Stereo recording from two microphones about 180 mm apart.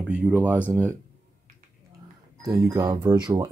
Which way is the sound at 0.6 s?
10° left (ahead or behind).